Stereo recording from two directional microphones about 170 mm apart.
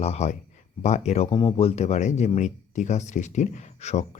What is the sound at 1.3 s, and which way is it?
Speech, 30° left (ahead or behind).